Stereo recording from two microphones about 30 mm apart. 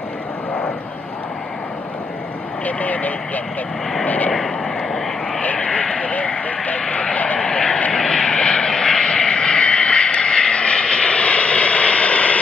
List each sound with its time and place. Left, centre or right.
2.6 s speech: left
5.4 s vehicle: left
7.9 s vehicle: left
9.0 s vehicle: left